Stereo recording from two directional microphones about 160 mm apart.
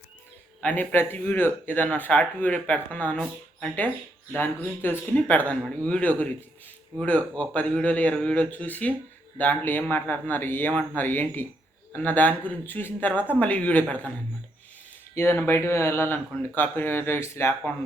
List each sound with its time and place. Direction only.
0.6 s speech: 10° left (ahead or behind)
7.3 s a man's voice: 10° left (ahead or behind)
15.1 s speech: 15° left (ahead or behind)